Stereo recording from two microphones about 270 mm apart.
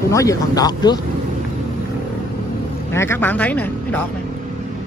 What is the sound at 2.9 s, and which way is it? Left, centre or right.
Speech, centre.